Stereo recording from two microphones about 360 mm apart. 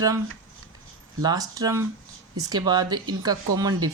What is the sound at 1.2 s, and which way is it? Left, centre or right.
Speech, centre.